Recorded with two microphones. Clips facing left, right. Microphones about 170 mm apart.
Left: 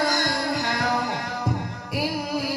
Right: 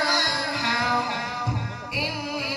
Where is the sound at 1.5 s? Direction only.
40° left (ahead or behind).